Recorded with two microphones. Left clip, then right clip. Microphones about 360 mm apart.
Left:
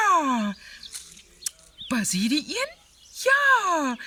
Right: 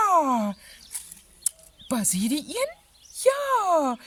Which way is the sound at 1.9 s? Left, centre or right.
Centre.